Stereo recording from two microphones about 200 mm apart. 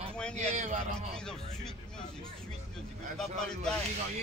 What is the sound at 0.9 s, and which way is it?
Speech, 5° left (ahead or behind).